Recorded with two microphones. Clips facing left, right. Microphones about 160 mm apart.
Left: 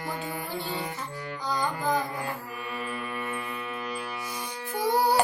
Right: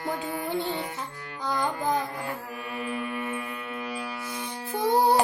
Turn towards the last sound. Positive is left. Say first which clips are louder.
# right 2 dB
turn(degrees=-20)  # may be behind; listen again after turning